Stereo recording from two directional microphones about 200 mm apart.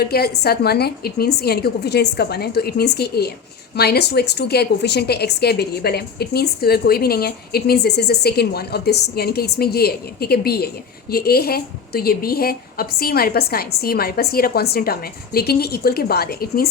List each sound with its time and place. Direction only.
0.0 s speech: 50° left (ahead or behind)